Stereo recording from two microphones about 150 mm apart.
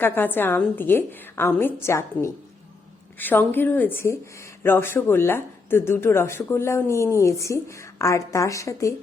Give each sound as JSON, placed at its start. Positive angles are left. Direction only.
{"t": 0.0, "sound": "a woman's voice", "side_deg": 15}